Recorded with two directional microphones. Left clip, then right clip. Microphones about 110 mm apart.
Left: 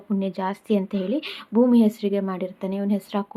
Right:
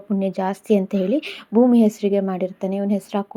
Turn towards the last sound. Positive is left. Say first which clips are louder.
# right 3 dB
turn(degrees=-25)  # may be behind; listen again after turning